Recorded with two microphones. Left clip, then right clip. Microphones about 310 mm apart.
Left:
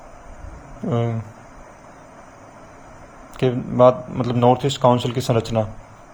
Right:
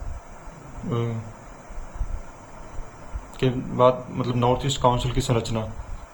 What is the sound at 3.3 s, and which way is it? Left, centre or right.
Speech, centre.